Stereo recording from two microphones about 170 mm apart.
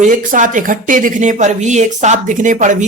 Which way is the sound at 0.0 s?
50° right (ahead or behind).